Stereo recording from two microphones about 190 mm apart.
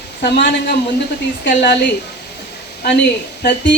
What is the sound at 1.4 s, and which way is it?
Speech, 65° left (ahead or behind).